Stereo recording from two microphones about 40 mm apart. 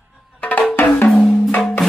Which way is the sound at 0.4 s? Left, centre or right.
Left.